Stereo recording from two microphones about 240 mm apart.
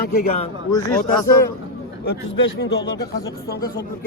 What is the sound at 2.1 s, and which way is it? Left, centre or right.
Speech, left.